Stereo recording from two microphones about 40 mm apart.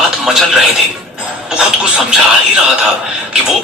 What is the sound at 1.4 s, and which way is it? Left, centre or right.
Music, centre.